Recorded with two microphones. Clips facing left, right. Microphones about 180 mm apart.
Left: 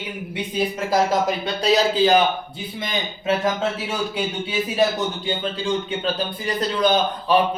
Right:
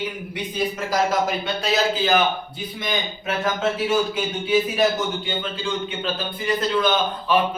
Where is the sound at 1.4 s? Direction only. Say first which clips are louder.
Left 3 dB; 35° left (ahead or behind).